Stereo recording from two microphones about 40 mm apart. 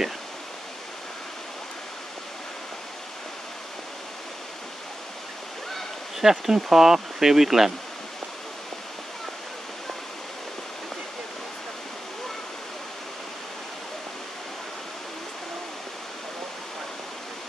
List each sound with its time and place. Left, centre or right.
6.2 s speech: centre